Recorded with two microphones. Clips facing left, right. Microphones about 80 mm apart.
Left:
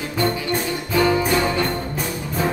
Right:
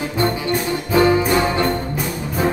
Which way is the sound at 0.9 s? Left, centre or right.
Right.